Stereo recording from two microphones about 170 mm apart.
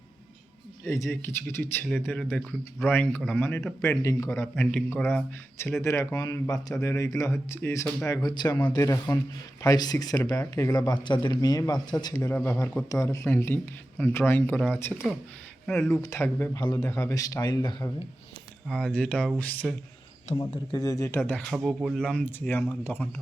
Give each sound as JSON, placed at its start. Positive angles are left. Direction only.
{"t": 0.9, "sound": "speech", "side_deg": 15}
{"t": 16.0, "sound": "speech", "side_deg": 15}
{"t": 18.7, "sound": "speech", "side_deg": 5}
{"t": 20.3, "sound": "speech", "side_deg": 25}
{"t": 21.5, "sound": "speech", "side_deg": -5}